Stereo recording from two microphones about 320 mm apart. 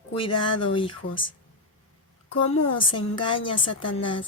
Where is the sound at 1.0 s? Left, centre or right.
Left.